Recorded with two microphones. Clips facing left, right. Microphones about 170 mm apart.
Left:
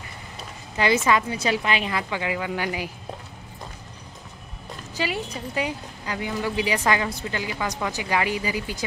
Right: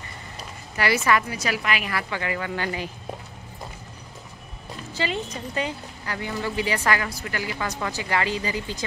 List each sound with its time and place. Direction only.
0.7 s a woman's voice: 20° left (ahead or behind)
4.9 s a woman's voice: 10° left (ahead or behind)